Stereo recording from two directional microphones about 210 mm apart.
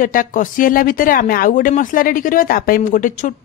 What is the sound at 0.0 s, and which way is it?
Speech, 40° left (ahead or behind).